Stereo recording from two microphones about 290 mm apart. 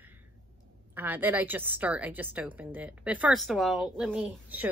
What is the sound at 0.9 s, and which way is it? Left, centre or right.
A woman's voice, centre.